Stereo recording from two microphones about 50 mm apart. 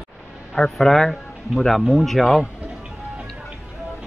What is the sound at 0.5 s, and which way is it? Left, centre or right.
A man's voice, centre.